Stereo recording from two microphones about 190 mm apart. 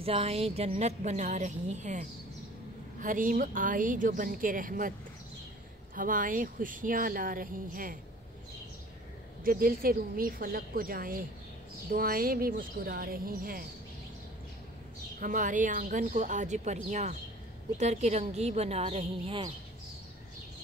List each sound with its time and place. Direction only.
0.0 s speech: 30° right (ahead or behind)
5.9 s speech: 45° right (ahead or behind)
9.4 s speech: 50° right (ahead or behind)
15.1 s speech: 45° right (ahead or behind); by 19.5 s 30° right (ahead or behind)